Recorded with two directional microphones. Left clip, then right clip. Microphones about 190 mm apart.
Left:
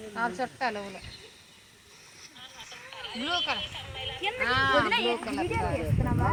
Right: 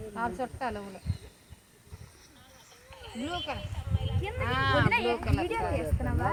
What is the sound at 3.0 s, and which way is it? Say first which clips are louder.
Speech: left 6 dB; 30° left (ahead or behind).